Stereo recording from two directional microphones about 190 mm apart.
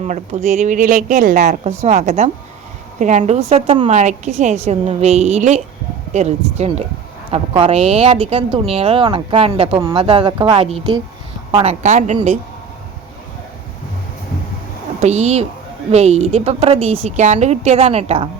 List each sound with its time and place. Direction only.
0.0 s a woman's voice: 40° right (ahead or behind)
15.0 s a woman's voice: 35° right (ahead or behind)